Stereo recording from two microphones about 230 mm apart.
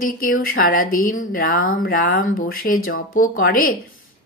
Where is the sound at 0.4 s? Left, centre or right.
Left.